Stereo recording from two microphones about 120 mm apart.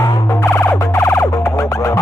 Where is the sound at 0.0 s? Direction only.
25° left (ahead or behind).